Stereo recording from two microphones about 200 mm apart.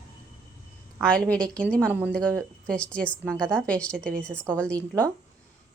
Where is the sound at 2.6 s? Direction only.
5° left (ahead or behind).